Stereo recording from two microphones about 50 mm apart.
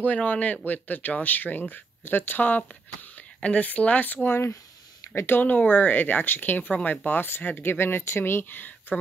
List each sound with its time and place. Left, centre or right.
0.0 s speech: left
5.1 s speech: left
5.4 s speech: left
7.1 s speech: left